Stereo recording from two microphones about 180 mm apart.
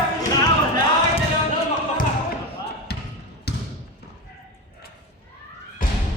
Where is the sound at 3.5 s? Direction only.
65° left (ahead or behind).